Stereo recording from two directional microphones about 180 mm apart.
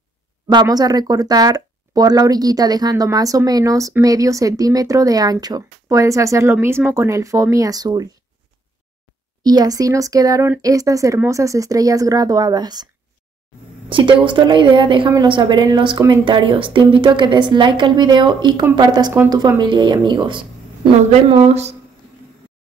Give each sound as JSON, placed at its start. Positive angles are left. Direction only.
{"t": 0.5, "sound": "speech", "side_deg": -25}
{"t": 9.4, "sound": "speech", "side_deg": -20}
{"t": 13.8, "sound": "speech", "side_deg": -30}